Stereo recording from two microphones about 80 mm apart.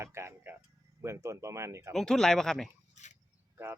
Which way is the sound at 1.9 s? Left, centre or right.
Centre.